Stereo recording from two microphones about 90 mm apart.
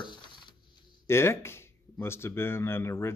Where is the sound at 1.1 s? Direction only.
30° left (ahead or behind).